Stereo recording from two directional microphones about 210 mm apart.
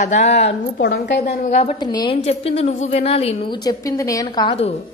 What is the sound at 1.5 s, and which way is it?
Speech, 35° left (ahead or behind).